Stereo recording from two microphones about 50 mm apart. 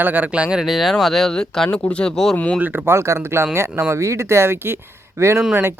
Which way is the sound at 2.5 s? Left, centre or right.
Right.